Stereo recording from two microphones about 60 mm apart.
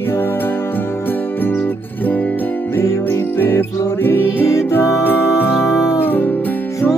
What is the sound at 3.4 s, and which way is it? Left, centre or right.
Music, left.